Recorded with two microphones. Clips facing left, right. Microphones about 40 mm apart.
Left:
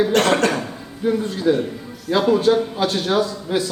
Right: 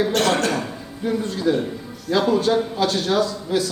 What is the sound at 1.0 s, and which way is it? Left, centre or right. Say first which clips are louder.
A man's voice: left 3 dB; centre.